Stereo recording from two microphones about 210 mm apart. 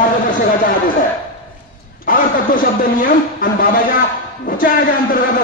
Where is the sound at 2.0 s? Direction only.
40° left (ahead or behind).